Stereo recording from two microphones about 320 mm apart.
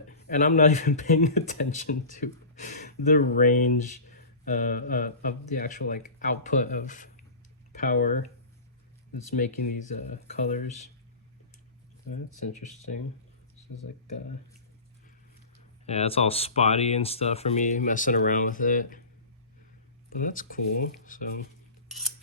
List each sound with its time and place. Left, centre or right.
0.3 s speech: left
9.3 s speech: left
15.9 s speech: centre
20.1 s speech: left